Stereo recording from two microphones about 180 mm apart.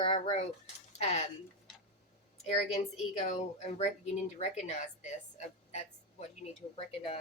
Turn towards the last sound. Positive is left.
turn(degrees=30)  # may be behind; listen again after turning